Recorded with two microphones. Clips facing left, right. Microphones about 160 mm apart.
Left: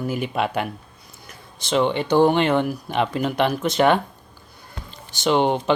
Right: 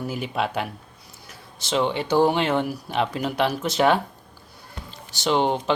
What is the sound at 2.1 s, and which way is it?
Speech, 5° right (ahead or behind).